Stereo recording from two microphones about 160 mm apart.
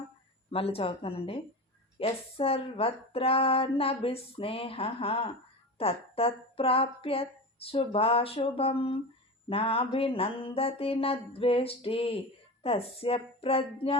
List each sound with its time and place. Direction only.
0.5 s speech: 35° left (ahead or behind)